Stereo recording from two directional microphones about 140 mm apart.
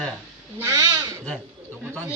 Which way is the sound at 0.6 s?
20° right (ahead or behind).